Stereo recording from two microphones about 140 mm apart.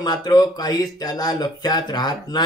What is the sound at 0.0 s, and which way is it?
Speech, 30° left (ahead or behind).